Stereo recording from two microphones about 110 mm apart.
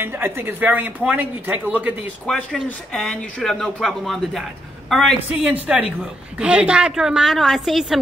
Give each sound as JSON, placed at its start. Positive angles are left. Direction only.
{"t": 0.0, "sound": "speech", "side_deg": -20}
{"t": 2.2, "sound": "speech", "side_deg": 5}
{"t": 5.5, "sound": "speech", "side_deg": -10}